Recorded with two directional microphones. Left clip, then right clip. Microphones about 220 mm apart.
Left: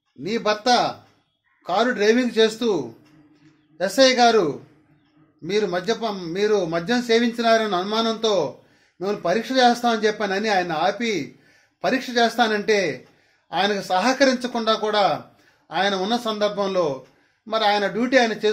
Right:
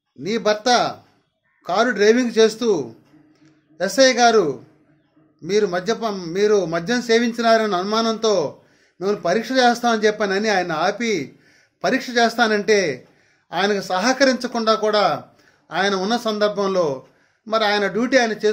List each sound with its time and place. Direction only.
0.2 s a man's voice: 15° right (ahead or behind)